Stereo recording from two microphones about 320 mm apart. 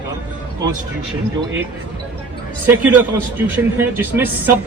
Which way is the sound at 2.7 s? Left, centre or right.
Centre.